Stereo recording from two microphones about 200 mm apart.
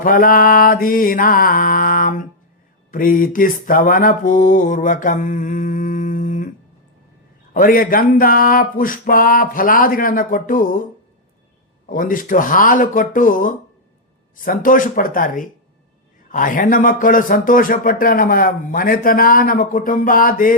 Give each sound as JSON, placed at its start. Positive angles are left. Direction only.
{"t": 0.0, "sound": "speech", "side_deg": 45}
{"t": 2.9, "sound": "mantra", "side_deg": 45}
{"t": 7.5, "sound": "speech", "side_deg": 45}
{"t": 11.9, "sound": "speech", "side_deg": 45}